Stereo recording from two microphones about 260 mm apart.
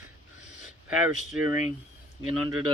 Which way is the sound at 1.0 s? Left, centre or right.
Centre.